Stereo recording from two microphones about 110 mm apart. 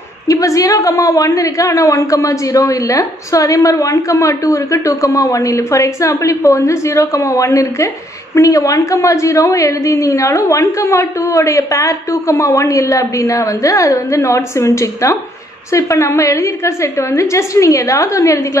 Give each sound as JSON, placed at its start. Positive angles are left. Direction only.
{"t": 0.3, "sound": "a woman's voice", "side_deg": 30}